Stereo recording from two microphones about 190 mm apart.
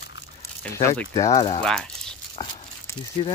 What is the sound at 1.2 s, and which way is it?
Speech, 20° left (ahead or behind).